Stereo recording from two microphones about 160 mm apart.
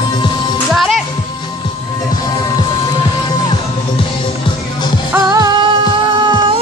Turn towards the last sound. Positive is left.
turn(degrees=-30)  # may be behind; listen again after turning